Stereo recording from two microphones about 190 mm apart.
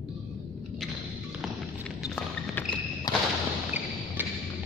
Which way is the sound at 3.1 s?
25° left (ahead or behind).